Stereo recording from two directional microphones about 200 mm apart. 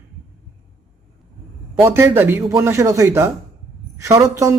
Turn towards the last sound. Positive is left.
turn(degrees=-15)  # may be behind; listen again after turning